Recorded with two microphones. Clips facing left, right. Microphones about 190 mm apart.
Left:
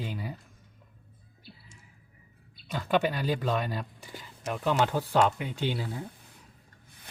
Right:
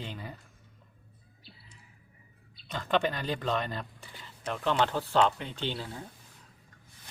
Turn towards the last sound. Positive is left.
turn(degrees=10)  # may be behind; listen again after turning